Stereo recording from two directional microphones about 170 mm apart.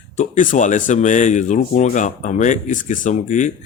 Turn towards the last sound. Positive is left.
turn(degrees=45)  # may be behind; listen again after turning